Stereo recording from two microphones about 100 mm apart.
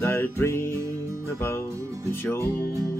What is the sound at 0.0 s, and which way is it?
Music, 25° left (ahead or behind).